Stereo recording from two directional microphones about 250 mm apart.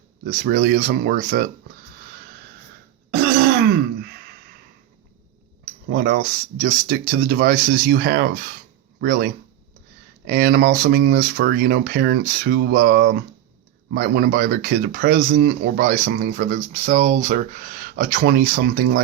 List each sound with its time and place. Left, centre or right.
0.3 s speech: right
5.9 s speech: right